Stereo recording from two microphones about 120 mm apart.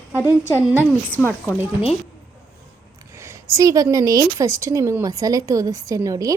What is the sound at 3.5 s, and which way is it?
A woman's voice, 25° right (ahead or behind).